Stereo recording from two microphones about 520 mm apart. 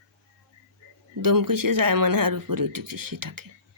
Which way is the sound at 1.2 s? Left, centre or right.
Right.